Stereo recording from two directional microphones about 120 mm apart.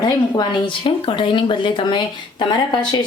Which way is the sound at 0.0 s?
35° left (ahead or behind).